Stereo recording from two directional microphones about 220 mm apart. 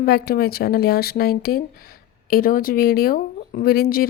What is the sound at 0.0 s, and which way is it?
Speech, 45° left (ahead or behind).